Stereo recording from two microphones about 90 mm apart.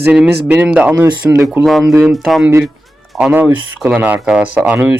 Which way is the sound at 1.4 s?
5° right (ahead or behind).